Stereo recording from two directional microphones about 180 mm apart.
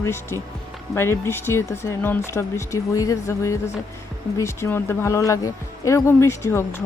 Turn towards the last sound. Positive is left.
turn(degrees=15)  # may be behind; listen again after turning